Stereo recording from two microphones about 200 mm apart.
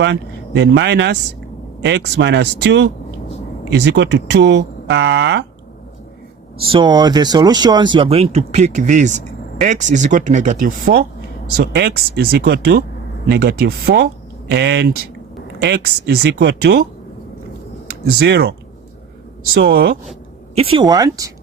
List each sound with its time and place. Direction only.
0.0 s speech: 60° right (ahead or behind)
6.6 s speech: 25° right (ahead or behind); by 11.0 s 45° right (ahead or behind)
11.5 s speech: 55° right (ahead or behind)
18.0 s speech: 55° right (ahead or behind)
19.5 s speech: 50° right (ahead or behind)
20.6 s speech: 25° right (ahead or behind)